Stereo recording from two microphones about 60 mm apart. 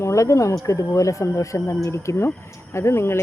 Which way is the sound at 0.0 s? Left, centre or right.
Left.